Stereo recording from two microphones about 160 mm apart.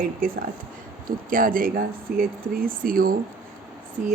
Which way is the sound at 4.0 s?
5° right (ahead or behind).